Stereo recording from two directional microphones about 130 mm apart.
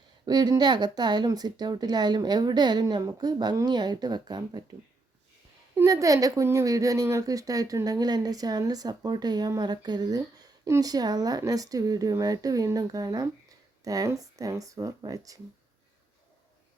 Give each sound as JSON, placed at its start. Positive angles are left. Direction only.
{"t": 0.3, "sound": "a woman's voice", "side_deg": -30}
{"t": 5.7, "sound": "a woman's voice", "side_deg": -25}